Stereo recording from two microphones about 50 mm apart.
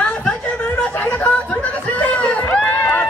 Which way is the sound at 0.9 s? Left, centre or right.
Left.